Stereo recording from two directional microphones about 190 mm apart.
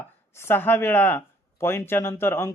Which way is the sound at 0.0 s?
10° left (ahead or behind).